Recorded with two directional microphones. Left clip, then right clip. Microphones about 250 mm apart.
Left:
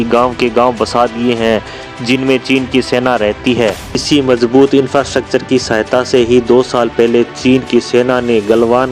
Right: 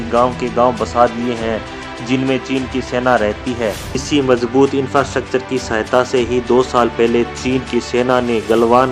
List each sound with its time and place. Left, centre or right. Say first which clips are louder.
0.1 s speech: left 3 dB; left